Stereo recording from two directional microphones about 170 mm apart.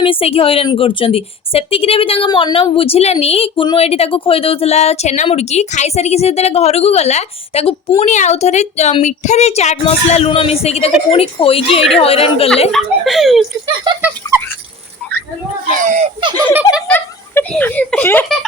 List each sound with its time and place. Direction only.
0.0 s a woman's voice: 35° left (ahead or behind)
12.7 s a child's voice: centre (ahead or behind)
13.9 s speech: 30° right (ahead or behind)
15.8 s speech: 45° right (ahead or behind)
16.5 s speech: 10° right (ahead or behind)
16.9 s a child's voice: 10° left (ahead or behind)